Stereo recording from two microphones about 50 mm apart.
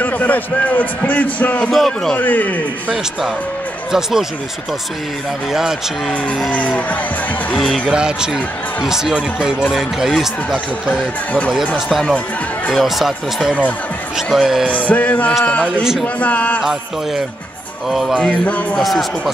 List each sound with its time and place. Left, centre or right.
0.0 s speech: left
1.7 s speech: centre
2.1 s speech: left
3.9 s speech: centre
5.5 s speech: centre
6.5 s music: left
7.5 s speech: centre
7.9 s speech: centre
10.9 s speech: left
12.7 s speech: centre
14.7 s speech: left
17.8 s speech: centre
18.2 s music: left
18.8 s speech: centre